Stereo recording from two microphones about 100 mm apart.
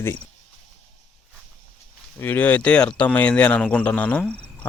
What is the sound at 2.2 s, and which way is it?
Speech, 20° left (ahead or behind).